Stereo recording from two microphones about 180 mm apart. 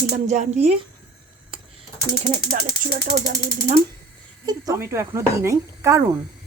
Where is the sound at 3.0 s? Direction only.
45° right (ahead or behind).